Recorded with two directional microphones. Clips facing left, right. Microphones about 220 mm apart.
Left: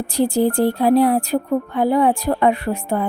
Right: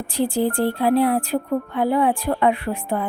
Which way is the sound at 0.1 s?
40° left (ahead or behind).